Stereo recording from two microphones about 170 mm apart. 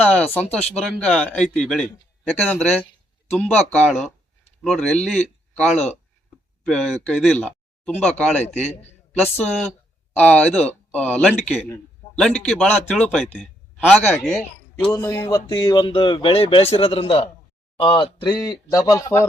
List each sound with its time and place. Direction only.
0.0 s a man's voice: 10° left (ahead or behind)
14.9 s speech: 20° left (ahead or behind)